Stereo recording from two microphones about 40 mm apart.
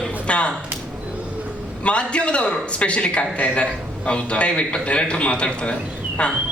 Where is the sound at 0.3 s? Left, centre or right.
Left.